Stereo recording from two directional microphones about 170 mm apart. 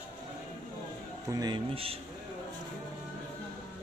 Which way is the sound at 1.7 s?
35° right (ahead or behind).